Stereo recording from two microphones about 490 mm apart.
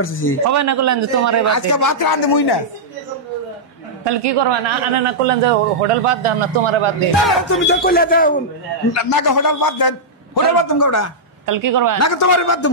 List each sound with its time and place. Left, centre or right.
0.0 s a man's voice: left
0.5 s a man's voice: right
1.5 s a man's voice: left
4.0 s a man's voice: right
7.2 s speech: centre
7.6 s a man's voice: centre
8.9 s a man's voice: left
11.4 s a man's voice: right
12.0 s a man's voice: left